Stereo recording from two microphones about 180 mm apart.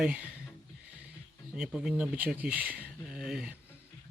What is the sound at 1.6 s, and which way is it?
Speech, 5° right (ahead or behind).